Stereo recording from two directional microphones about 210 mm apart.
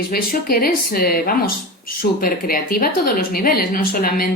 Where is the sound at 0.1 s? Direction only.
45° left (ahead or behind).